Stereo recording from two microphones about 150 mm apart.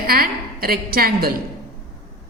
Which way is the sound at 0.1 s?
80° right.